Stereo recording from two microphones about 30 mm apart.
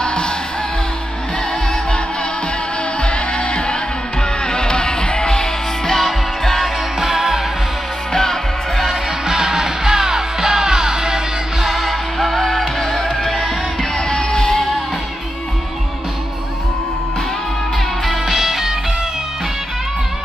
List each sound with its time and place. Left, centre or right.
0.0 s music: left
3.0 s music: left; by 5.9 s centre
5.9 s music: centre
7.0 s music: centre
8.1 s music: centre
9.2 s music: centre
11.6 s music: centre
14.3 s music: centre
18.2 s music: centre